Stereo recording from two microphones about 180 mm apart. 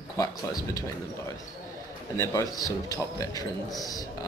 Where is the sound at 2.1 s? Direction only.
15° left (ahead or behind).